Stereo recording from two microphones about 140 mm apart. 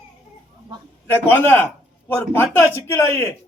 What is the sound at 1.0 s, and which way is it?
Speech, 15° left (ahead or behind).